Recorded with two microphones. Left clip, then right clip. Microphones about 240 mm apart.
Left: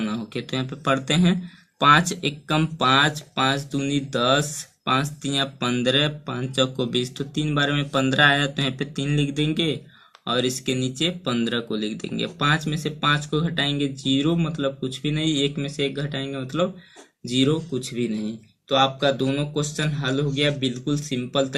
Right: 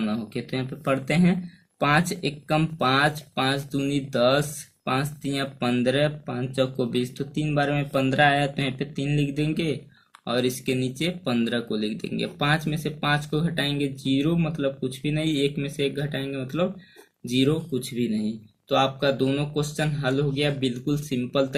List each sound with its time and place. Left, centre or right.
0.0 s speech: centre